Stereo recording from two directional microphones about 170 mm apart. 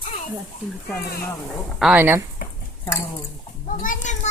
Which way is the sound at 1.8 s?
5° right (ahead or behind).